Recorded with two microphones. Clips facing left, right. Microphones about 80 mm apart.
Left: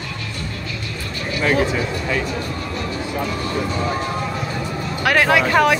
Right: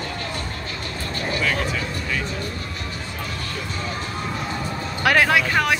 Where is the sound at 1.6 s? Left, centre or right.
Centre.